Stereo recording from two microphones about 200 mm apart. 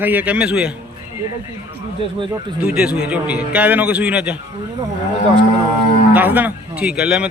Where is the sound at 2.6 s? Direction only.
5° right (ahead or behind).